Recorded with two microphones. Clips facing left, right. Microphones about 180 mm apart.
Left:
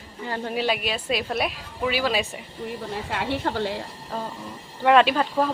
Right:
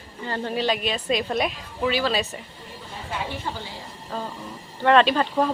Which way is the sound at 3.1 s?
70° left (ahead or behind).